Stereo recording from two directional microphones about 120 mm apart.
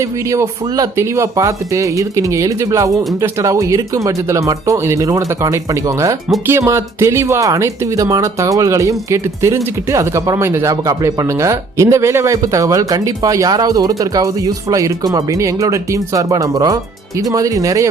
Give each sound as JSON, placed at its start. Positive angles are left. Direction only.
{"t": 0.0, "sound": "speech", "side_deg": -25}
{"t": 2.9, "sound": "speech", "side_deg": 0}
{"t": 3.2, "sound": "speech", "side_deg": -25}